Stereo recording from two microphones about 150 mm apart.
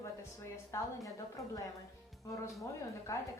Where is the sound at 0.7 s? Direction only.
20° left (ahead or behind).